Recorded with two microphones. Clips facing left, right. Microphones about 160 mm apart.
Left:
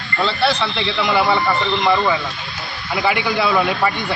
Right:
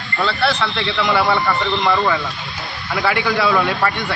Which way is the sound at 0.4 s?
20° left (ahead or behind).